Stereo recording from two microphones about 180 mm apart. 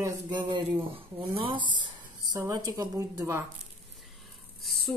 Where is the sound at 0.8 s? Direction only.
30° right (ahead or behind).